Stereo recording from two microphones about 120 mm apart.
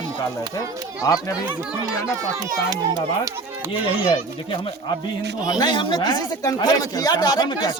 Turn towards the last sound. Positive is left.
turn(degrees=35)  # may be behind; listen again after turning